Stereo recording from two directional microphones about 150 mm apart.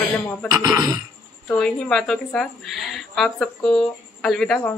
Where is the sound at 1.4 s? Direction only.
5° left (ahead or behind).